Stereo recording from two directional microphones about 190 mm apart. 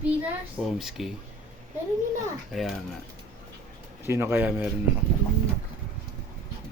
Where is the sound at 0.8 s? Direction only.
Centre (ahead or behind).